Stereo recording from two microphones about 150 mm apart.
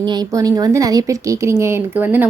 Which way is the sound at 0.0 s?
30° right (ahead or behind).